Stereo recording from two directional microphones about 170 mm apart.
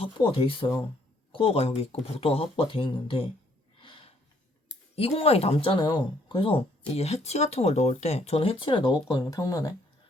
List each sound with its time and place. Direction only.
0.0 s speech: 30° left (ahead or behind)
3.8 s a sound: 30° left (ahead or behind)
4.9 s speech: 35° left (ahead or behind)